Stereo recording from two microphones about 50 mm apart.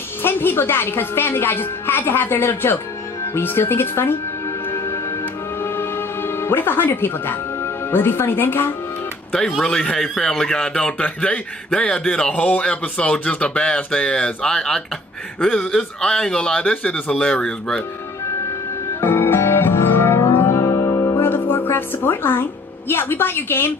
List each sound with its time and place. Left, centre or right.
0.2 s a woman's voice: left
5.6 s music: left
9.6 s speech: centre
12.3 s speech: left
16.9 s speech: centre
18.9 s music: left